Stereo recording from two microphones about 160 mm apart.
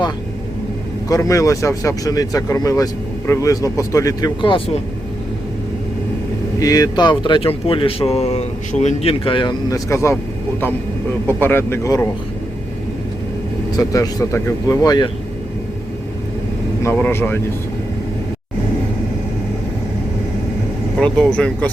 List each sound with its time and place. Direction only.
1.0 s speech: 20° left (ahead or behind)
6.6 s speech: 20° left (ahead or behind)
11.3 s speech: 15° left (ahead or behind)
13.7 s speech: 25° left (ahead or behind)
16.8 s speech: 15° left (ahead or behind)
21.0 s speech: 5° left (ahead or behind)